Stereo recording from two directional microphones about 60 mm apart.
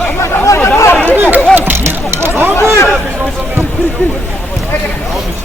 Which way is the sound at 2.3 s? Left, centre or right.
Right.